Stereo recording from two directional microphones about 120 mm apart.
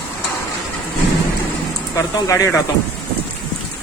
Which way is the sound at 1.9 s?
25° left (ahead or behind).